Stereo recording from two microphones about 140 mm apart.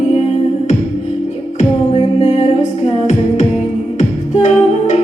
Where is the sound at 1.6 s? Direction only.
50° left (ahead or behind).